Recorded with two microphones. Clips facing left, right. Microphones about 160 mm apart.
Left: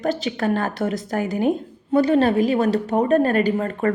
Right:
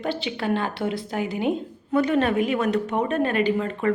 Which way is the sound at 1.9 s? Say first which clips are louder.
Left 4 dB; 35° left (ahead or behind).